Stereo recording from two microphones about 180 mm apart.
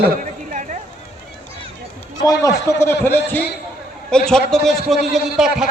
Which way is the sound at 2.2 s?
20° left (ahead or behind).